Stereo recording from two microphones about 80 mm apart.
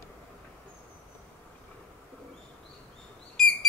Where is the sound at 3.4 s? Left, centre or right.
Centre.